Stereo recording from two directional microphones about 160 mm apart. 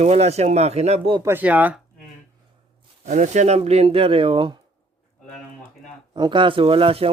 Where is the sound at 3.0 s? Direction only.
50° right (ahead or behind).